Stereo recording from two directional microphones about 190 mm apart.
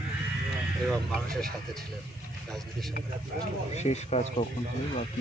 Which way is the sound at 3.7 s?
35° left (ahead or behind).